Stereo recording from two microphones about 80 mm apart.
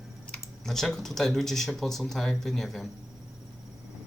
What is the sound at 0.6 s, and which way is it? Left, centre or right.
Speech, centre.